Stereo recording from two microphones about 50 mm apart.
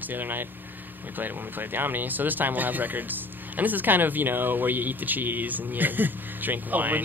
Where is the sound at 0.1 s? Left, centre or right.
Right.